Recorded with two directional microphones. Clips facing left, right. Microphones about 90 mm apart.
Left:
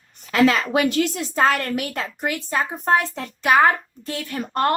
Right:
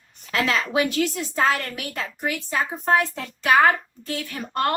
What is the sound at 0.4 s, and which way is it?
A woman's voice, 60° left (ahead or behind).